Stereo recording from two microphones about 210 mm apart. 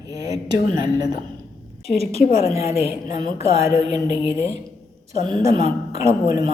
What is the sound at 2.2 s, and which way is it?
Speech, 30° left (ahead or behind).